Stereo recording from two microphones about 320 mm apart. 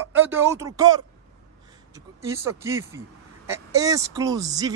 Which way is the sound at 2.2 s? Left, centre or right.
Centre.